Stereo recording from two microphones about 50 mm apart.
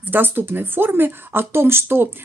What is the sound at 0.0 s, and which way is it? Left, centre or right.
Speech, right.